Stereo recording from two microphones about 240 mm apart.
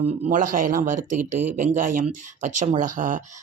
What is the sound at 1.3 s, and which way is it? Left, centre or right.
Speech, right.